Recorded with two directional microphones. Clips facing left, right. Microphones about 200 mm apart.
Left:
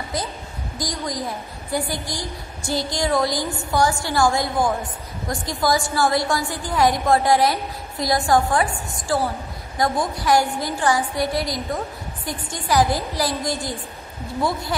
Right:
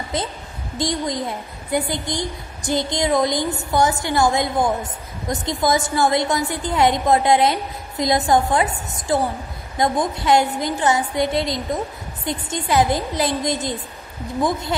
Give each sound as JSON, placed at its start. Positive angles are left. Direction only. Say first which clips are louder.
{"t": 0.1, "sound": "a woman's voice", "louder": "right 3 dB", "side_deg": -25}